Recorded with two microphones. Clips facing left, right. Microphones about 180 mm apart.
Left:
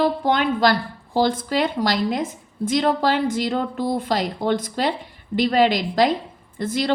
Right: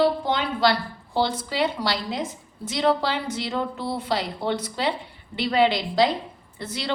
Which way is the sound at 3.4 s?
45° left (ahead or behind).